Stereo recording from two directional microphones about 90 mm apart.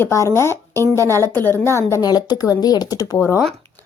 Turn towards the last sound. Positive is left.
turn(degrees=35)  # may be behind; listen again after turning